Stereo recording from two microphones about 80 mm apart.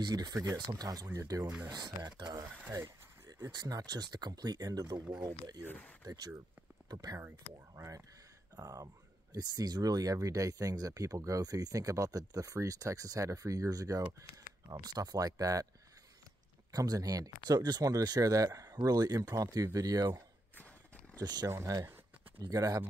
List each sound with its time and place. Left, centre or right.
0.0 s speech: right
1.7 s speech: right
3.5 s speech: right
5.7 s speech: left
6.0 s speech: right
7.7 s speech: right
16.7 s speech: right
21.2 s speech: right
21.5 s speech: right
22.4 s speech: right